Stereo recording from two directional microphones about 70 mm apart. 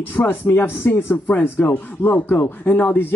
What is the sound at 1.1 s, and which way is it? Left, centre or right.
Speech, left.